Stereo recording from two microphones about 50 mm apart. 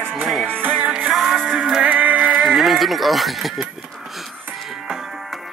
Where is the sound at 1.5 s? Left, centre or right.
Centre.